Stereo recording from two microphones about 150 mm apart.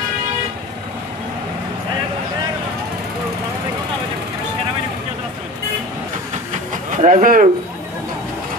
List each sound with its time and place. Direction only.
6.9 s speech: 60° right (ahead or behind)